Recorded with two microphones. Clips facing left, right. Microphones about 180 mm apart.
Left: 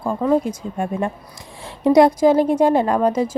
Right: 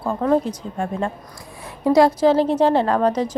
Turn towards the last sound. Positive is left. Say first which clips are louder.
# left 1 dB
turn(degrees=10)  # may be behind; listen again after turning